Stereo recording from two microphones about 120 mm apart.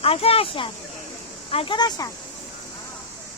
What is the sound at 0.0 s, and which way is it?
Speech, 55° left (ahead or behind).